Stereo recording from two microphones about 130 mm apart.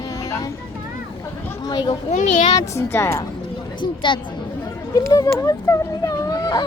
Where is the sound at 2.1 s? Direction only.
90° left.